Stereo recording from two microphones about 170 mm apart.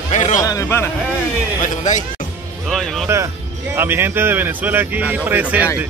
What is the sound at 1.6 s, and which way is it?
Speech, 45° left (ahead or behind).